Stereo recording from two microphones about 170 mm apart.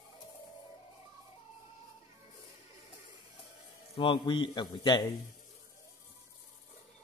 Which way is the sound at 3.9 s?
25° left (ahead or behind).